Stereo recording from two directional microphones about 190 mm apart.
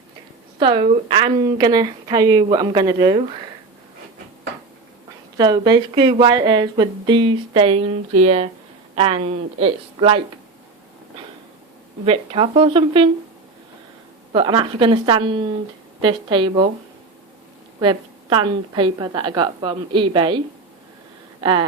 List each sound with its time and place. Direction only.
0.6 s speech: 25° right (ahead or behind)
5.4 s a woman's voice: 20° right (ahead or behind)
12.0 s speech: 30° right (ahead or behind)
14.3 s speech: 25° right (ahead or behind)
17.7 s speech: 25° right (ahead or behind)
21.4 s speech: 25° right (ahead or behind)